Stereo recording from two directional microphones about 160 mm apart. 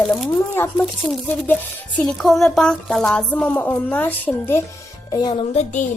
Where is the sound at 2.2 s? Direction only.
5° left (ahead or behind).